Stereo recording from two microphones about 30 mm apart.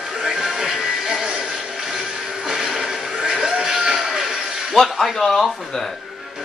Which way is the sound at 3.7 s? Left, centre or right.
Right.